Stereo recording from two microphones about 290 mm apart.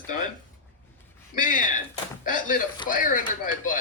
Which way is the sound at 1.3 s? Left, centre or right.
Left.